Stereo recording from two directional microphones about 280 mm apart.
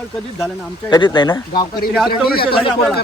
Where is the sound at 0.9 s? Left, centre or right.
Centre.